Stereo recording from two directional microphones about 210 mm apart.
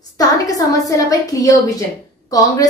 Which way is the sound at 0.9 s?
15° left (ahead or behind).